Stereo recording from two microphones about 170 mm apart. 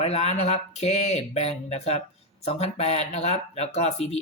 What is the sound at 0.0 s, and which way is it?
A woman's voice, 40° left (ahead or behind).